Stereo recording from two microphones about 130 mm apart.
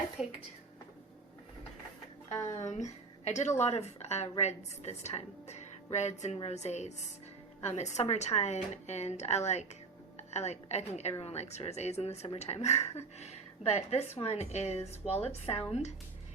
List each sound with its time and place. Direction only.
0.2 s a woman's voice: 5° right (ahead or behind)
2.3 s a woman's voice: 65° left (ahead or behind)